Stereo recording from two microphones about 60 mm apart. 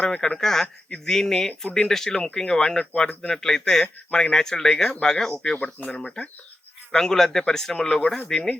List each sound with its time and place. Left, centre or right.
0.2 s speech: centre
5.5 s speech: left
5.9 s speech: centre